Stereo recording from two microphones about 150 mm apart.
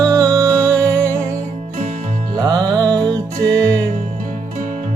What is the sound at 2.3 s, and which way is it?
Music, 25° right (ahead or behind).